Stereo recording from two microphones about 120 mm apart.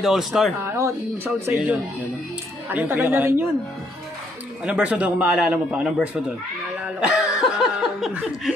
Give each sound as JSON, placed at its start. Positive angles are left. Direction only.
{"t": 0.0, "sound": "speech", "side_deg": 0}
{"t": 0.6, "sound": "speech", "side_deg": -25}
{"t": 2.7, "sound": "a man's voice", "side_deg": -15}
{"t": 4.6, "sound": "a man's voice", "side_deg": -10}
{"t": 7.0, "sound": "laughter", "side_deg": -5}